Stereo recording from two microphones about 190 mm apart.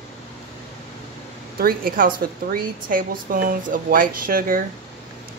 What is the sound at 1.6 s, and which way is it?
Speech, 50° right (ahead or behind).